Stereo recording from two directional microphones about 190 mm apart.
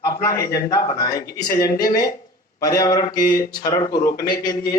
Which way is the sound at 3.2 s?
45° left (ahead or behind).